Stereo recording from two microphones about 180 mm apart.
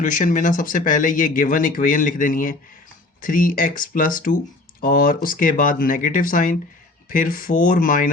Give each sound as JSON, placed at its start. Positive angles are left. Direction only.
{"t": 0.0, "sound": "speech", "side_deg": 45}